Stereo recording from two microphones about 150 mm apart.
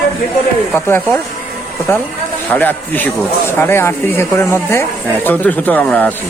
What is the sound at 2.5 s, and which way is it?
Speech, 10° left (ahead or behind).